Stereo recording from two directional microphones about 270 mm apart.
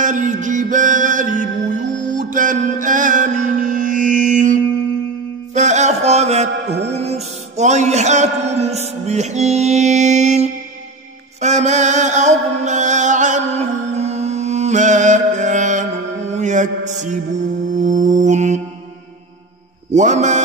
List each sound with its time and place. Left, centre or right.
0.0 s mantra: right
5.5 s music: right
19.9 s mantra: right